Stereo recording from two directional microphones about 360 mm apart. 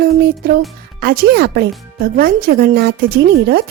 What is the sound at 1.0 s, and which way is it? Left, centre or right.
A woman's voice, right.